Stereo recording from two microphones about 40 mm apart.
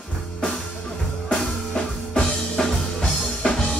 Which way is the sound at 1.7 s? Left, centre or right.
Left.